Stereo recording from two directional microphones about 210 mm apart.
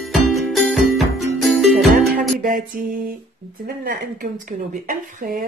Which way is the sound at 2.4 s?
40° right (ahead or behind).